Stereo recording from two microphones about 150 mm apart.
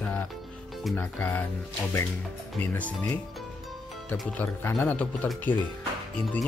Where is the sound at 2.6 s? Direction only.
10° left (ahead or behind).